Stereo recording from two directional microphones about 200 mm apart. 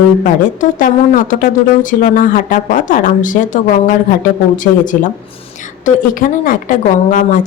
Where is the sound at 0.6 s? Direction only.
40° left (ahead or behind).